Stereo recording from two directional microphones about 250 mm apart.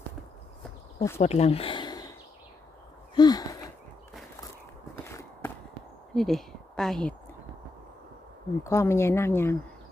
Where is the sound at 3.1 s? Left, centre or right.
Centre.